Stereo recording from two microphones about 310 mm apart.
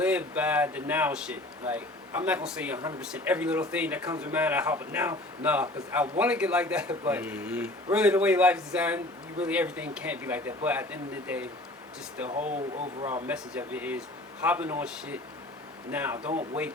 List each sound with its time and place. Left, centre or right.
0.0 s speech: centre
12.4 s speech: right
13.2 s speech: centre